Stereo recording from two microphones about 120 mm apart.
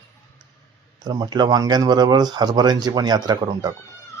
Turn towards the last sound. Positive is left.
turn(degrees=-30)  # may be behind; listen again after turning